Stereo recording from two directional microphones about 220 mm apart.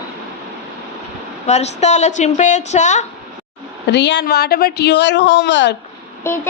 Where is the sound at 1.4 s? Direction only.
30° left (ahead or behind).